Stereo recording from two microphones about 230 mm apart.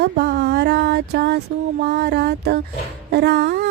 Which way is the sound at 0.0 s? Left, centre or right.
Right.